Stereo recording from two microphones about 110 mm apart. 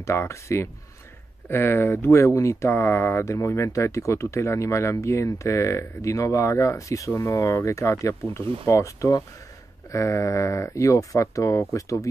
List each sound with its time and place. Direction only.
0.0 s speech: 25° left (ahead or behind)